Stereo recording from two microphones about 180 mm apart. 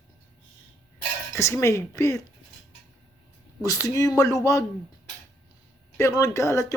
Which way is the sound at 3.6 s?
20° left (ahead or behind).